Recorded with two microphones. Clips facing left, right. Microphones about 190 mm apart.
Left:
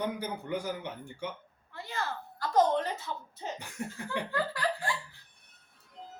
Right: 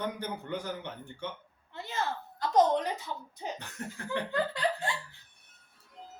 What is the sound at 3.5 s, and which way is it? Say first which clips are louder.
Speech: left 2 dB; 10° left (ahead or behind).